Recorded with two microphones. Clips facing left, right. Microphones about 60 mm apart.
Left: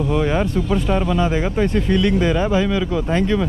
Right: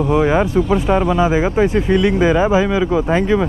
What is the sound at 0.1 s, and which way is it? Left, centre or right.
Speech, centre.